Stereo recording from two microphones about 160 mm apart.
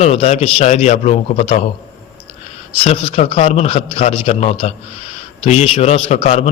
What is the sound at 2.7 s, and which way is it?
A man's voice, 35° left (ahead or behind).